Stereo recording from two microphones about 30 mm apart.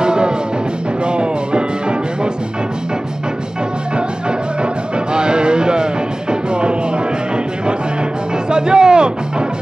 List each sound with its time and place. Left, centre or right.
0.0 s music: right
4.9 s music: right
8.5 s music: right